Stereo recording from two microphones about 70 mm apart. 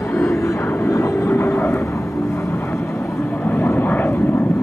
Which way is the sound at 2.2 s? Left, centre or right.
Left.